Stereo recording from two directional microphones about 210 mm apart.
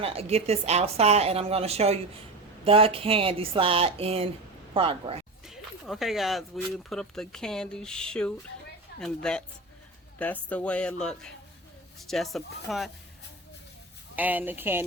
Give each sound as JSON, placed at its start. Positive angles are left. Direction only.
{"t": 0.0, "sound": "a woman's voice", "side_deg": -30}
{"t": 5.5, "sound": "speech", "side_deg": 0}
{"t": 10.5, "sound": "speech", "side_deg": 5}
{"t": 14.2, "sound": "speech", "side_deg": -10}